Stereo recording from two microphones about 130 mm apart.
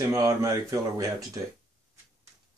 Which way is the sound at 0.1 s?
25° right (ahead or behind).